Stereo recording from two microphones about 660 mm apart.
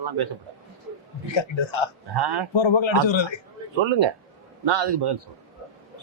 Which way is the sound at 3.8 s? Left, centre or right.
Right.